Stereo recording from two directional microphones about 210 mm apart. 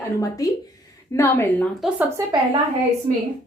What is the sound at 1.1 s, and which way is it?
Speech, 10° left (ahead or behind).